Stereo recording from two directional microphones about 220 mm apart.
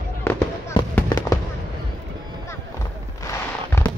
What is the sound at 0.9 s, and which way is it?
Fireworks, 15° left (ahead or behind).